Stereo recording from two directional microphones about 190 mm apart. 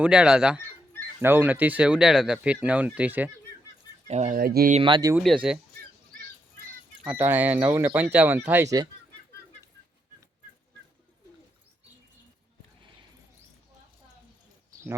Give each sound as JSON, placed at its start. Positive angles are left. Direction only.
{"t": 0.0, "sound": "speech", "side_deg": -5}
{"t": 4.1, "sound": "speech", "side_deg": -35}
{"t": 4.4, "sound": "speech", "side_deg": -50}
{"t": 4.7, "sound": "speech", "side_deg": -25}
{"t": 5.1, "sound": "speech", "side_deg": -5}
{"t": 7.0, "sound": "speech", "side_deg": -10}